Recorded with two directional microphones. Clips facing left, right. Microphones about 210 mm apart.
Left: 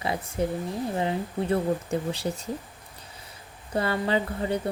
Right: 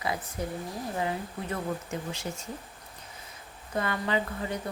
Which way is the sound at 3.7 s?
30° left (ahead or behind).